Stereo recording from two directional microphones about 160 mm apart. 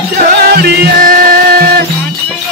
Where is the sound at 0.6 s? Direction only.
75° right (ahead or behind).